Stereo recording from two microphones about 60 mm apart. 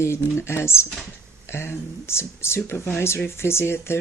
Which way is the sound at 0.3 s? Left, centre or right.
Left.